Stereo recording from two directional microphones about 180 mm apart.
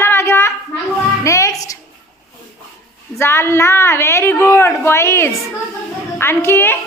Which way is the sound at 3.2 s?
15° left (ahead or behind).